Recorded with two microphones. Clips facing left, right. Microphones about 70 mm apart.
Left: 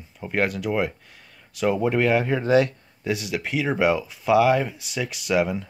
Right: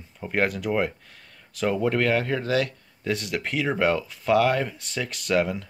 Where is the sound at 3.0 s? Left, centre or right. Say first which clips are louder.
Left 1 dB; centre.